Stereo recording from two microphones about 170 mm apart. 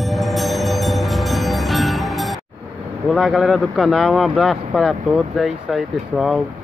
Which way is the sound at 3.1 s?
Centre (ahead or behind).